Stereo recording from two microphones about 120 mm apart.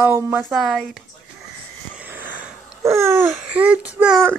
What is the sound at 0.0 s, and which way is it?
Speech, 20° right (ahead or behind).